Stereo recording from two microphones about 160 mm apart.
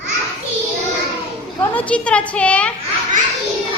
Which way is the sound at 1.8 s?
10° left (ahead or behind).